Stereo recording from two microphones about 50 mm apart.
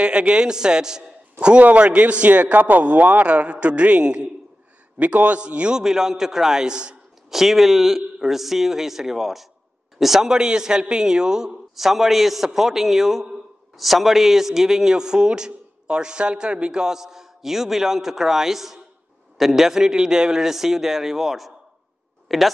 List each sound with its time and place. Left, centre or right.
0.0 s a man's voice: centre
1.4 s a man's voice: right
5.8 s a man's voice: centre
7.2 s a man's voice: centre
11.7 s a man's voice: centre